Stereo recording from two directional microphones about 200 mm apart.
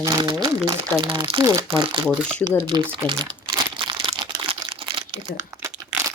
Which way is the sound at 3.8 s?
25° right (ahead or behind).